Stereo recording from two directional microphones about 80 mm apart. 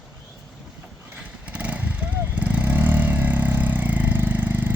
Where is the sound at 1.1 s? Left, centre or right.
Centre.